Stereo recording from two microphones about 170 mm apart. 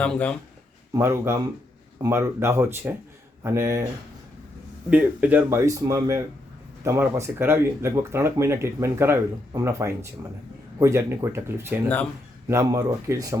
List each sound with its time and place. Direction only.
0.0 s speech: 5° left (ahead or behind)
0.9 s speech: 15° right (ahead or behind)
4.9 s speech: 10° right (ahead or behind)